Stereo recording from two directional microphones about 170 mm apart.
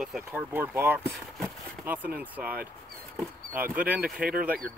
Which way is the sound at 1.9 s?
10° right (ahead or behind).